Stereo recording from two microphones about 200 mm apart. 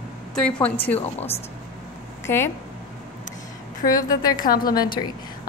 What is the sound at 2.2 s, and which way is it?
Speech, 10° left (ahead or behind).